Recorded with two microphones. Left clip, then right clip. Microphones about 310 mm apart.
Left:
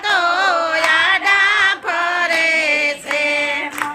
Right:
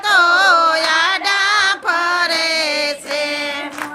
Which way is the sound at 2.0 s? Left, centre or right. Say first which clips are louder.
Left 4 dB; right.